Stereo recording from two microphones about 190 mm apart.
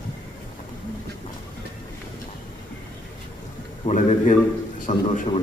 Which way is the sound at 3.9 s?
40° left (ahead or behind).